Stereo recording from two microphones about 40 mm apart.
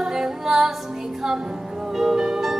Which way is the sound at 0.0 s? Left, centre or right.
Centre.